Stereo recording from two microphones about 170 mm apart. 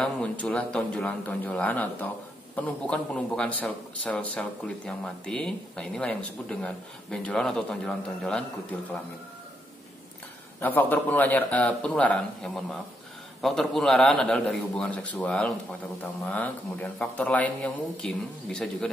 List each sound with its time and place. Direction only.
0.0 s a man's voice: 5° left (ahead or behind)
10.6 s a man's voice: 10° left (ahead or behind)